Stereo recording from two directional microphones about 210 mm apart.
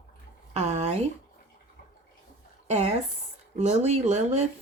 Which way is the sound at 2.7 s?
30° right (ahead or behind).